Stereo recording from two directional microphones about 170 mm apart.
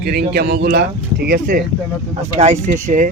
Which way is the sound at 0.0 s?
70° right (ahead or behind).